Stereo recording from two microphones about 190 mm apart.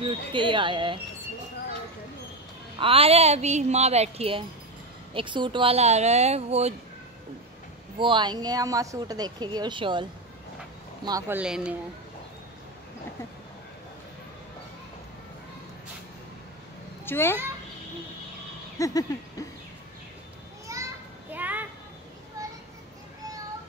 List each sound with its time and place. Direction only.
0.0 s speech: 25° right (ahead or behind)
2.8 s a woman's voice: 30° right (ahead or behind)
8.0 s speech: 25° right (ahead or behind)
11.1 s speech: 15° right (ahead or behind)
17.0 s a child's voice: 10° left (ahead or behind)
18.8 s a sound: 20° left (ahead or behind)
20.7 s children playing: 15° right (ahead or behind)
21.3 s a sound: 10° right (ahead or behind)